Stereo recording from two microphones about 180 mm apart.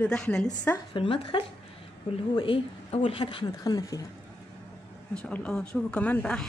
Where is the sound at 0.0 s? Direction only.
5° left (ahead or behind).